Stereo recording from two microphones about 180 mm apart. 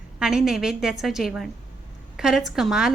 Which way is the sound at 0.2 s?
5° right (ahead or behind).